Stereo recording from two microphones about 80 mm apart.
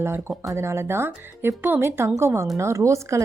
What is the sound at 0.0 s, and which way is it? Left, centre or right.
Speech, right.